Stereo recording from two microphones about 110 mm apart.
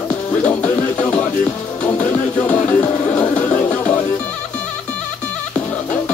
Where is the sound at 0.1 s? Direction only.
15° left (ahead or behind).